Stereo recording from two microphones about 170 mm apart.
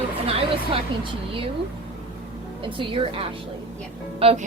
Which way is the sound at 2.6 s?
30° right (ahead or behind).